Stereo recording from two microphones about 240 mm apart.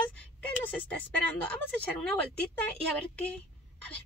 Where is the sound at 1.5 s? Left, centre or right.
Centre.